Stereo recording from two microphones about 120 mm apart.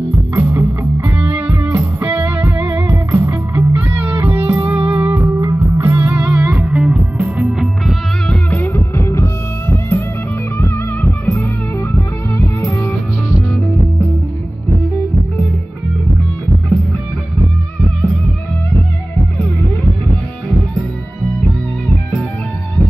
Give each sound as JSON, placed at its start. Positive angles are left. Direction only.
{"t": 0.3, "sound": "music", "side_deg": -20}
{"t": 6.3, "sound": "music", "side_deg": -25}
{"t": 6.6, "sound": "music", "side_deg": -5}
{"t": 8.5, "sound": "music", "side_deg": 15}